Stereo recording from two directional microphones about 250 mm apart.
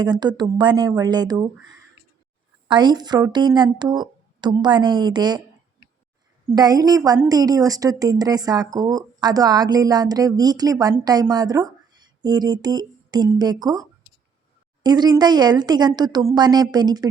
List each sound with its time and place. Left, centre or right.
0.0 s a woman's voice: centre
2.6 s a woman's voice: centre
6.5 s a woman's voice: centre
14.8 s a woman's voice: centre